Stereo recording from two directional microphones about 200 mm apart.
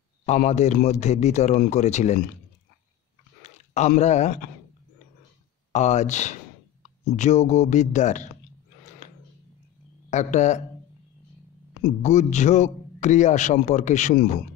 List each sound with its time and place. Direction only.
0.4 s speech: 35° left (ahead or behind)
3.4 s speech: 35° left (ahead or behind)
5.7 s speech: 35° left (ahead or behind)
10.0 s a man's voice: 35° left (ahead or behind)
12.0 s a man's voice: 35° left (ahead or behind)